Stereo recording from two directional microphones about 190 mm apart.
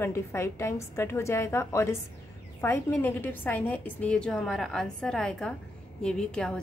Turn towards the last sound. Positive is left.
turn(degrees=5)  # may be behind; listen again after turning